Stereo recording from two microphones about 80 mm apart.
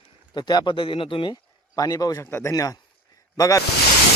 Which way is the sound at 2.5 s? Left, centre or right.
Left.